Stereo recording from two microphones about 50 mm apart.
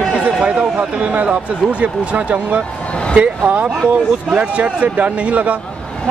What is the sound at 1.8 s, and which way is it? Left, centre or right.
Speech, right.